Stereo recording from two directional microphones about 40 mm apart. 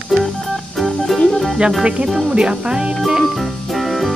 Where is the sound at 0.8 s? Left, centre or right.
Centre.